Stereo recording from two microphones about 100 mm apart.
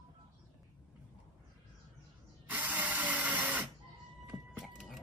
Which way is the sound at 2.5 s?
15° right (ahead or behind).